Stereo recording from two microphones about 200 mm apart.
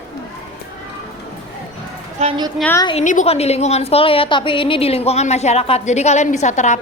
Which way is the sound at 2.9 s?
35° left (ahead or behind).